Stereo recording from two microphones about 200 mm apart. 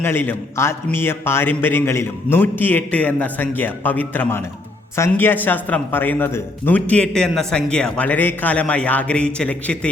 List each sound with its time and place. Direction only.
0.0 s a man's voice: 10° left (ahead or behind)